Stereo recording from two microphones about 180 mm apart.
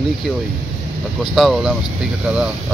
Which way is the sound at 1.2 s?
Centre (ahead or behind).